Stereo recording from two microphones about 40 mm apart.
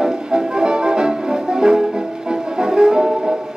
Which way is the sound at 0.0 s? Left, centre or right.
Centre.